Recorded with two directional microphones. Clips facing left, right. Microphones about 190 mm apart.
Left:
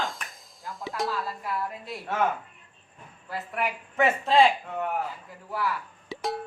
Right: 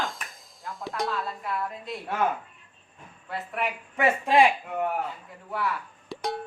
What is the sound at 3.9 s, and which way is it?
Speech, 15° right (ahead or behind).